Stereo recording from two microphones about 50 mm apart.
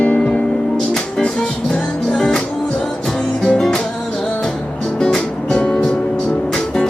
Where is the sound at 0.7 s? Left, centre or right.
Centre.